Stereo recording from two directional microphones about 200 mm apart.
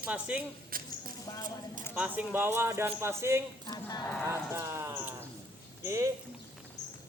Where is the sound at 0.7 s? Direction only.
45° right (ahead or behind).